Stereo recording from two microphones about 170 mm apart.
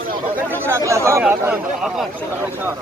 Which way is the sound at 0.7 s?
15° right (ahead or behind).